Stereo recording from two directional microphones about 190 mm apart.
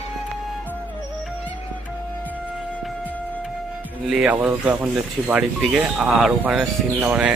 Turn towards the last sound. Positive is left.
turn(degrees=-5)  # may be behind; listen again after turning